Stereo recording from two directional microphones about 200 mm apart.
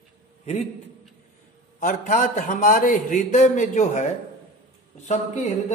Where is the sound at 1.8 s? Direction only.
40° left (ahead or behind).